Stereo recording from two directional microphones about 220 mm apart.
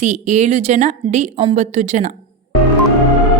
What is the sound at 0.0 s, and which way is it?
A woman's voice, 35° right (ahead or behind).